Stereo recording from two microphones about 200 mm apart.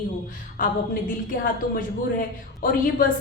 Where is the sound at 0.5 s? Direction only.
45° left (ahead or behind).